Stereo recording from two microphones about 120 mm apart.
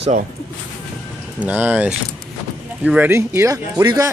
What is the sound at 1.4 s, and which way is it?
Speech, 15° right (ahead or behind).